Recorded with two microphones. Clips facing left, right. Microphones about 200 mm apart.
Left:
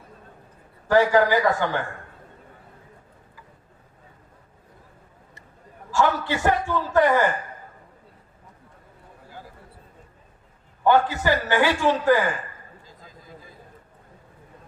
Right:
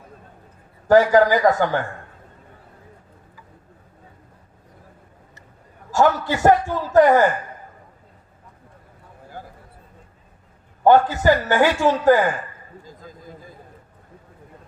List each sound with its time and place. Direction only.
0.9 s a man's voice: 40° right (ahead or behind)
5.9 s a man's voice: 40° right (ahead or behind)
10.8 s a man's voice: 45° right (ahead or behind)
12.8 s a sound: 45° right (ahead or behind)